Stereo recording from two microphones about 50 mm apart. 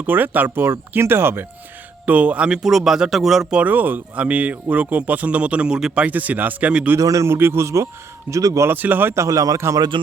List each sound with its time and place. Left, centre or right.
0.0 s speech: right
2.0 s a man's voice: right
2.5 s speech: centre
3.6 s a man's voice: right
6.1 s a man's voice: right
6.9 s a man's voice: right
7.3 s speech: right
7.6 s a man's voice: right
8.3 s a man's voice: right
9.1 s a man's voice: right